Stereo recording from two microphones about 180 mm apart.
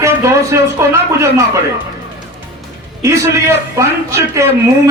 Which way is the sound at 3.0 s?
15° right (ahead or behind).